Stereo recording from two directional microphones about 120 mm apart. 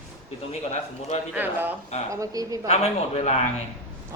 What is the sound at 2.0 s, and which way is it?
Speech, 25° right (ahead or behind).